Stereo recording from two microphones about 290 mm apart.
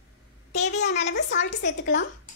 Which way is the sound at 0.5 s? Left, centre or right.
Left.